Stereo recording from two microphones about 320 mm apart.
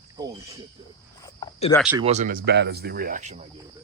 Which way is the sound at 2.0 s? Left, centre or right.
Right.